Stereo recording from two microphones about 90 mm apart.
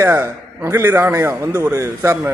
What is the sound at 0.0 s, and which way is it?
A man's voice, 30° right (ahead or behind).